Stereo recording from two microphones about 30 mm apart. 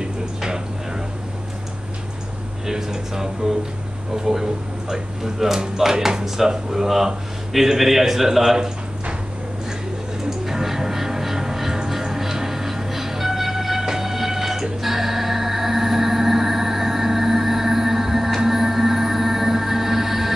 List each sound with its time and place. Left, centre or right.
0.0 s a sound: right
2.6 s speech: centre
10.4 s music: centre